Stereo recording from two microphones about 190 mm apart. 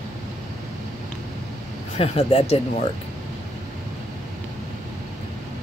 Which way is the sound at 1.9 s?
30° left (ahead or behind).